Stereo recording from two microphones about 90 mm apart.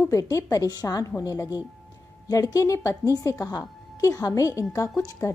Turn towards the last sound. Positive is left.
turn(degrees=35)  # may be behind; listen again after turning